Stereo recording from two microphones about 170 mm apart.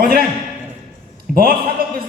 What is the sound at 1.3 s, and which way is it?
Speech, 60° right (ahead or behind).